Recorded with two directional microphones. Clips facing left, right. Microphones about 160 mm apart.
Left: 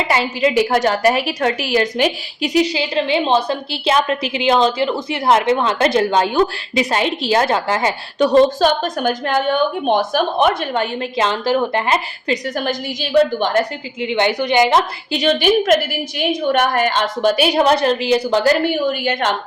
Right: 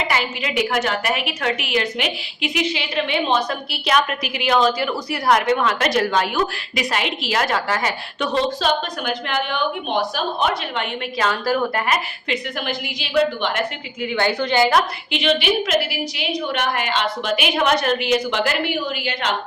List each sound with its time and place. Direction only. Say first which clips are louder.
0.1 s a woman's voice: left 7 dB; 30° left (ahead or behind)
8.3 s a woman's voice: left 7 dB; 45° left (ahead or behind)
10.8 s a woman's voice: left 5 dB; 30° left (ahead or behind)
12.3 s a woman's voice: left 5 dB; 40° left (ahead or behind)
14.0 s a woman's voice: left 3 dB; 20° left (ahead or behind)
15.1 s a woman's voice: left 5 dB; 40° left (ahead or behind)